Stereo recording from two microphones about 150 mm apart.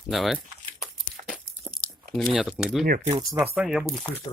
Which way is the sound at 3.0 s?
25° right (ahead or behind).